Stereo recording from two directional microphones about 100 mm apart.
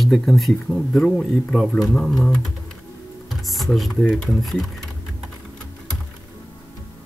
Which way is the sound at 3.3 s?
Centre (ahead or behind).